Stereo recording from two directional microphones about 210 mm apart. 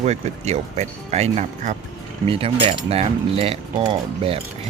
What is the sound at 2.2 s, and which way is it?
Mechanisms, 25° right (ahead or behind).